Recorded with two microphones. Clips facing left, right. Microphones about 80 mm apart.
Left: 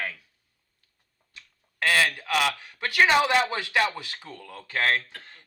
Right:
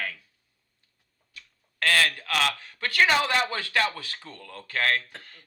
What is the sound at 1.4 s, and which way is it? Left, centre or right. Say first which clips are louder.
Speech: left 1 dB; centre.